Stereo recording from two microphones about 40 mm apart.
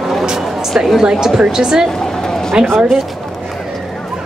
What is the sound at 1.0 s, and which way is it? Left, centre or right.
Speech, centre.